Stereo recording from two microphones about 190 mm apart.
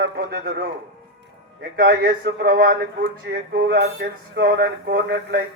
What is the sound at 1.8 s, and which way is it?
Speech, 50° right (ahead or behind).